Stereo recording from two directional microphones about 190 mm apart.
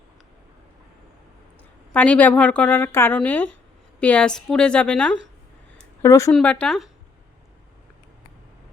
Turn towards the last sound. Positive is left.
turn(degrees=0)  # may be behind; listen again after turning